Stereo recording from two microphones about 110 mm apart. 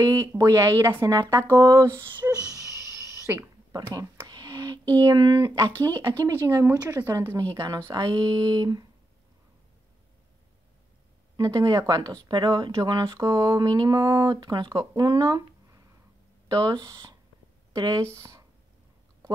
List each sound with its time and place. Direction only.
0.0 s speech: 25° right (ahead or behind)
2.2 s a sound: 20° right (ahead or behind)
3.8 s speech: 25° right (ahead or behind)
4.3 s a sound: 35° right (ahead or behind)
5.9 s speech: 25° right (ahead or behind)
11.3 s speech: 35° right (ahead or behind)